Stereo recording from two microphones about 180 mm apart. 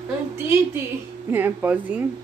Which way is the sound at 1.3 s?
10° right (ahead or behind).